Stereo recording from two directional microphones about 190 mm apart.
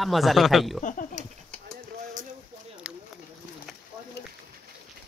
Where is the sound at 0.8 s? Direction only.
40° left (ahead or behind).